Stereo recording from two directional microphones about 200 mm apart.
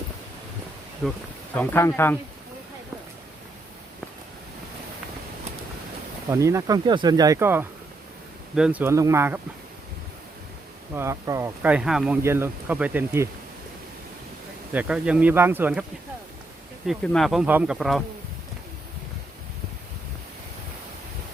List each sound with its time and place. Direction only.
1.0 s speech: 5° left (ahead or behind)
6.3 s speech: 15° right (ahead or behind)
10.9 s speech: 15° right (ahead or behind)
14.7 s speech: 5° right (ahead or behind)
16.8 s speech: centre (ahead or behind)